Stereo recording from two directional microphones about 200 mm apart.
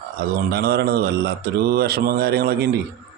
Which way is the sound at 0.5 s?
50° right (ahead or behind).